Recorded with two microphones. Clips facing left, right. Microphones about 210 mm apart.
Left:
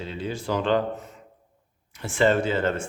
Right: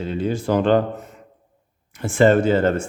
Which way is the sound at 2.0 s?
50° right (ahead or behind).